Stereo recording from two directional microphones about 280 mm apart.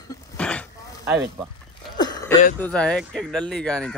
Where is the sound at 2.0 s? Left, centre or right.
Centre.